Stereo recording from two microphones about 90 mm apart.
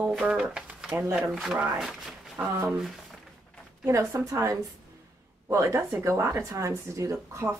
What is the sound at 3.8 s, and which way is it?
Speech, 35° right (ahead or behind).